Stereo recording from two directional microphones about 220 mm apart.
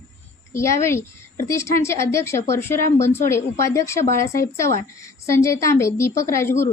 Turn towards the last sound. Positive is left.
turn(degrees=10)  # may be behind; listen again after turning